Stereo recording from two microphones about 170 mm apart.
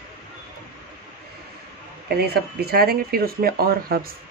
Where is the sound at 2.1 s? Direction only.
65° right (ahead or behind).